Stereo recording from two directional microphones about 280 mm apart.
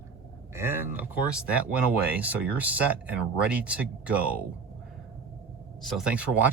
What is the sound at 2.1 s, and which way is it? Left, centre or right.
Speech, centre.